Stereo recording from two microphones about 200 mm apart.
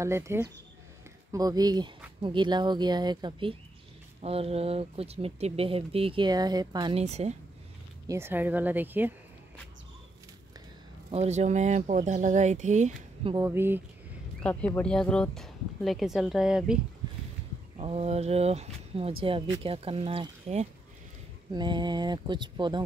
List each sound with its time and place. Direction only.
0.0 s a woman's voice: 15° right (ahead or behind); by 7.3 s 35° right (ahead or behind)
8.1 s a woman's voice: 10° right (ahead or behind)
11.1 s speech: 35° right (ahead or behind)
13.4 s a woman's voice: 10° right (ahead or behind)
14.4 s speech: 5° left (ahead or behind)
17.7 s speech: 30° right (ahead or behind)